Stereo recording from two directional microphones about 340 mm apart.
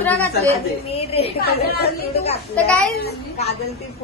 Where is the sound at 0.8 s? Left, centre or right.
Centre.